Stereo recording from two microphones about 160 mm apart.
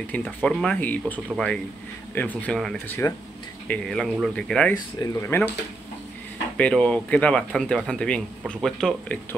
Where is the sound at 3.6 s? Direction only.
5° left (ahead or behind).